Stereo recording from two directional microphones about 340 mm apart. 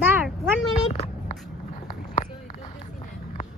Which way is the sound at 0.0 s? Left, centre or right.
Centre.